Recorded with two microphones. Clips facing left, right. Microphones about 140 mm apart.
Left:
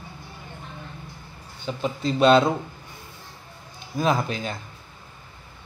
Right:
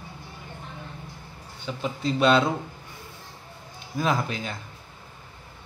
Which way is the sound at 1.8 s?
30° left (ahead or behind).